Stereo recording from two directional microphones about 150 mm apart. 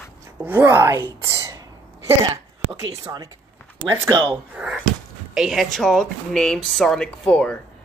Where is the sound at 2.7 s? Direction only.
25° right (ahead or behind).